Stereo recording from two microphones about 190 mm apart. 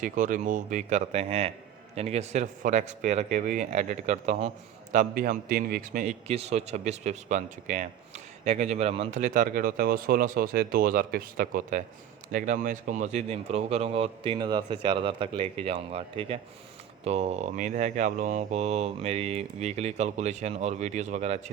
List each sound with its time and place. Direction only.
0.0 s speech: 45° right (ahead or behind)